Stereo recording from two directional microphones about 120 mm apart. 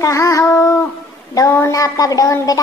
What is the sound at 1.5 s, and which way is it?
Child singing, 25° left (ahead or behind).